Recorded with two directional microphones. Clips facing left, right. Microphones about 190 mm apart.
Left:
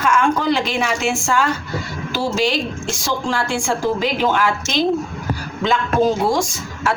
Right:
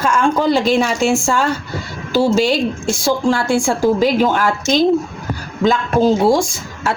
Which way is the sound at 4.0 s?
45° right (ahead or behind).